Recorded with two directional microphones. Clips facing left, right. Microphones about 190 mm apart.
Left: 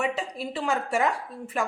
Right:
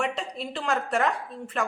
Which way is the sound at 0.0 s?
5° left (ahead or behind).